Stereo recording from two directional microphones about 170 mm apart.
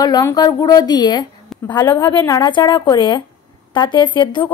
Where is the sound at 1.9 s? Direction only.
15° left (ahead or behind).